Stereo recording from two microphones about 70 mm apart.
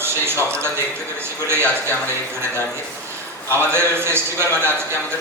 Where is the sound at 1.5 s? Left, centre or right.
Right.